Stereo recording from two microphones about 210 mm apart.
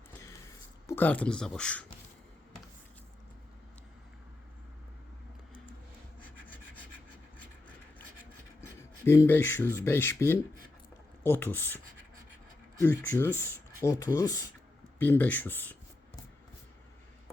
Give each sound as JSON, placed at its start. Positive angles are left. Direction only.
{"t": 0.9, "sound": "speech", "side_deg": 10}
{"t": 9.0, "sound": "speech", "side_deg": 10}
{"t": 12.9, "sound": "speech", "side_deg": 10}